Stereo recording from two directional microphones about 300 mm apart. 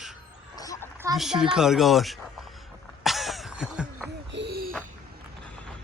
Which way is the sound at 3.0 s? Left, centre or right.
Centre.